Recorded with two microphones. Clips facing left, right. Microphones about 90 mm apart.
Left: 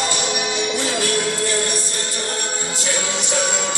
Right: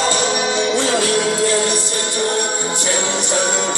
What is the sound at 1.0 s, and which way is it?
Music, 90° right.